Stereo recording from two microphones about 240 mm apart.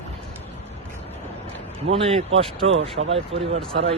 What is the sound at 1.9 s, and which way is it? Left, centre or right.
A man's voice, right.